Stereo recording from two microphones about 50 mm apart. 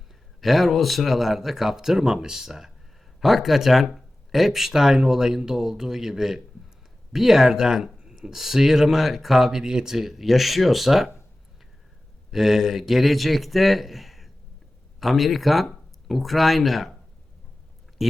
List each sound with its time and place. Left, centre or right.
0.4 s speech: centre
12.3 s speech: centre